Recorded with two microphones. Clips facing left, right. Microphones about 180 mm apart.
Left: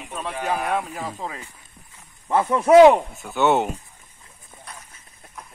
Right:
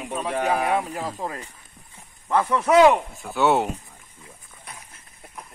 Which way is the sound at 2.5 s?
30° left (ahead or behind).